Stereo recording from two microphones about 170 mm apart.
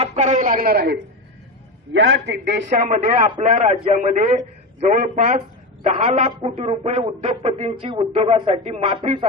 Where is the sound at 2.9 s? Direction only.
45° right (ahead or behind).